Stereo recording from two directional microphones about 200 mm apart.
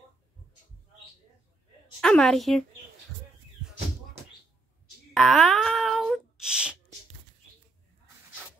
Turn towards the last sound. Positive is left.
turn(degrees=-5)  # may be behind; listen again after turning